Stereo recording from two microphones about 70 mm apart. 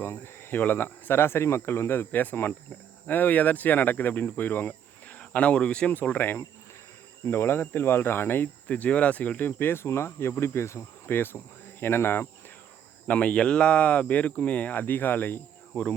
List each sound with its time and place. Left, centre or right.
0.0 s speech: left
8.6 s speech: left
9.5 s speech: left
13.1 s speech: centre